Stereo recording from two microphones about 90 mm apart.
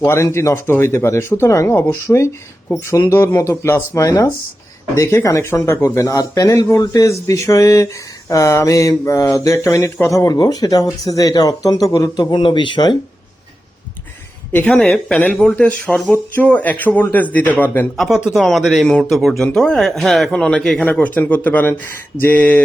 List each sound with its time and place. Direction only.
0.0 s speech: 30° left (ahead or behind)
1.9 s mantra: 35° left (ahead or behind); by 13.0 s 60° left (ahead or behind)
14.5 s a man's voice: 15° left (ahead or behind)
17.9 s speech: centre (ahead or behind)
20.3 s a man's voice: 10° left (ahead or behind)